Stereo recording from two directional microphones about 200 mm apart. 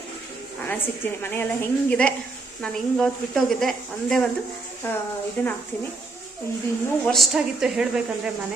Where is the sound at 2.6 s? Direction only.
5° left (ahead or behind).